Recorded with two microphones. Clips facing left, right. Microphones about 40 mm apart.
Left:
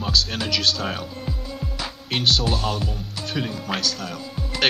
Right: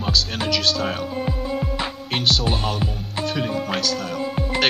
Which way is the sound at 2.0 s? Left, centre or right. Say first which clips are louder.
Left 1 dB; centre.